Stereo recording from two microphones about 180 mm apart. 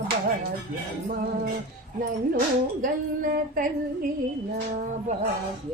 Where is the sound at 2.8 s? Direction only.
50° right (ahead or behind).